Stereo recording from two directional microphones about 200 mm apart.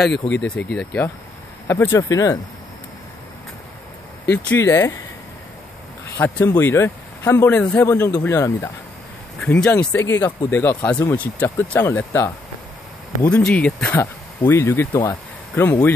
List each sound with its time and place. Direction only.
0.7 s speech: 5° left (ahead or behind)
4.5 s speech: 10° left (ahead or behind)
6.1 s speech: 10° left (ahead or behind)